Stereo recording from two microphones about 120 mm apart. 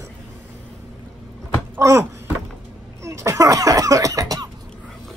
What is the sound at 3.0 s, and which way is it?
Cough, 25° right (ahead or behind).